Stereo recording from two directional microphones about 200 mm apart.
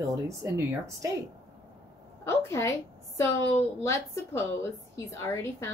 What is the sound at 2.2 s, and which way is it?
Speech, 15° left (ahead or behind).